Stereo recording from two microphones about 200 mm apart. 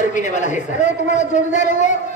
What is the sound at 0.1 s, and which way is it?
A man's voice, 35° left (ahead or behind).